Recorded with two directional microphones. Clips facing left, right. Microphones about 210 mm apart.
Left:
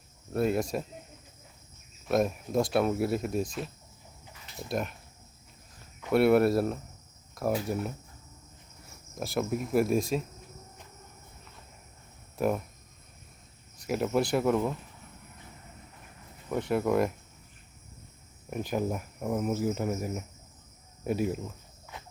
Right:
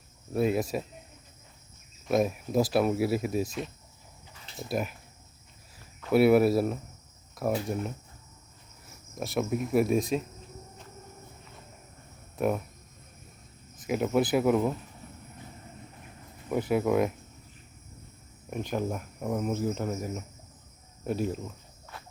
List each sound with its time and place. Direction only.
0.3 s speech: centre (ahead or behind)
2.0 s speech: centre (ahead or behind)
4.7 s speech: 5° right (ahead or behind)
6.1 s speech: centre (ahead or behind)
9.1 s speech: centre (ahead or behind)
12.4 s speech: centre (ahead or behind)
13.7 s speech: centre (ahead or behind)
16.5 s speech: 5° right (ahead or behind)
18.5 s speech: 5° left (ahead or behind)
21.9 s walk: 15° left (ahead or behind)